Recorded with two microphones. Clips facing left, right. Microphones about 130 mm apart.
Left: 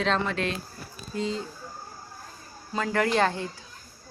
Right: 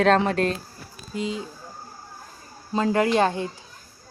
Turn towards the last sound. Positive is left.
turn(degrees=-20)  # may be behind; listen again after turning